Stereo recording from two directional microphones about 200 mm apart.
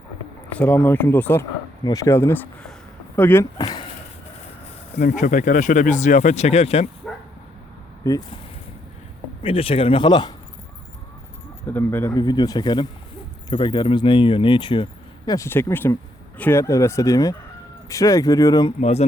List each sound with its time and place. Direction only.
0.6 s speech: 10° left (ahead or behind)
4.9 s speech: 40° left (ahead or behind)
7.0 s bow-wow: 5° left (ahead or behind)
9.4 s speech: 25° left (ahead or behind)
11.7 s speech: 10° left (ahead or behind)
15.3 s speech: 15° left (ahead or behind)
18.8 s speech: 30° left (ahead or behind)